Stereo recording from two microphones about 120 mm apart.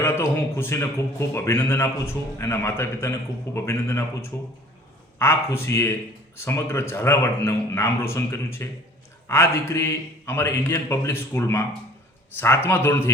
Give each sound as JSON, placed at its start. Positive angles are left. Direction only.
{"t": 0.0, "sound": "speech", "side_deg": 20}